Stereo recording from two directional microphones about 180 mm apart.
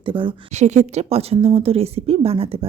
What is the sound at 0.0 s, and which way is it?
Speech, 30° right (ahead or behind).